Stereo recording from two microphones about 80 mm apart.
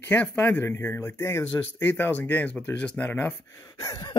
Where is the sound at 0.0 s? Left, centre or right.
Left.